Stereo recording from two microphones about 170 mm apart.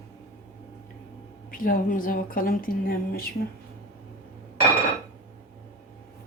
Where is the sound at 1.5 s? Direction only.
55° left (ahead or behind).